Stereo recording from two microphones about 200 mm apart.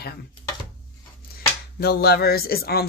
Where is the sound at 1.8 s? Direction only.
50° left (ahead or behind).